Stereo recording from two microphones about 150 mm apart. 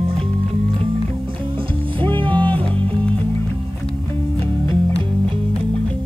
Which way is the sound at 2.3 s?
10° left (ahead or behind).